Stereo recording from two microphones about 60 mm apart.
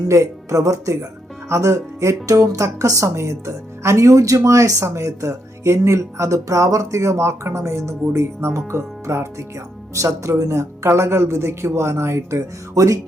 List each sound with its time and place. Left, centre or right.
0.1 s speech: right